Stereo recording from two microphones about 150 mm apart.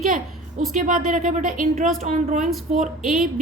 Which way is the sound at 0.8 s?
60° right (ahead or behind).